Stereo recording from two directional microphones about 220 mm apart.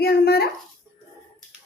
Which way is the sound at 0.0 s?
45° left (ahead or behind).